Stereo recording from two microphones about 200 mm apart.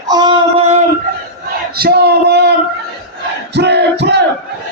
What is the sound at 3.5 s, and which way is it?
Battle cry, 55° right (ahead or behind).